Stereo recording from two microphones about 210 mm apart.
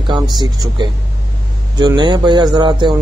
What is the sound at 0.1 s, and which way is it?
Speech, 20° right (ahead or behind).